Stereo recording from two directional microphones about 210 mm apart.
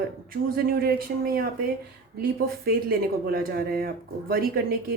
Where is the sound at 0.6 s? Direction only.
45° right (ahead or behind).